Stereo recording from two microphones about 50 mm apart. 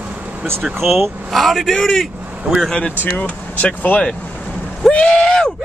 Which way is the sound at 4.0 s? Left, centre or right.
Left.